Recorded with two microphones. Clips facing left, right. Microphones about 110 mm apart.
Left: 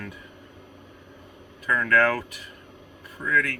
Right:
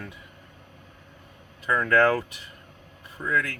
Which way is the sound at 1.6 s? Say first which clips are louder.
Right 1 dB; 25° right (ahead or behind).